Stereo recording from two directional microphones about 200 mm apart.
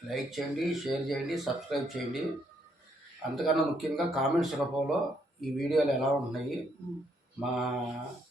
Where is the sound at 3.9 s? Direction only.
Centre (ahead or behind).